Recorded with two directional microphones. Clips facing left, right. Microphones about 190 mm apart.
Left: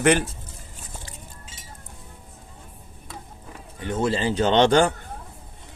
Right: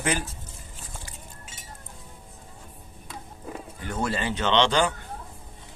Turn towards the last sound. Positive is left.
turn(degrees=50)  # may be behind; listen again after turning